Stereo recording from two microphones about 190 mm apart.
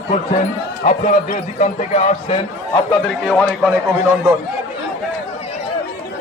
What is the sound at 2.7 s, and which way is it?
Speech, centre (ahead or behind).